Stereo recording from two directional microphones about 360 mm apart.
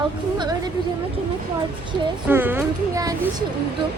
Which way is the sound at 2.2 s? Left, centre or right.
Centre.